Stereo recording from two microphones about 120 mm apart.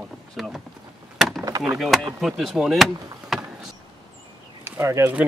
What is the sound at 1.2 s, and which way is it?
Wood, centre (ahead or behind).